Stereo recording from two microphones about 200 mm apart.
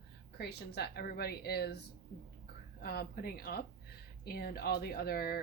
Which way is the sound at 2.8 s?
50° left (ahead or behind).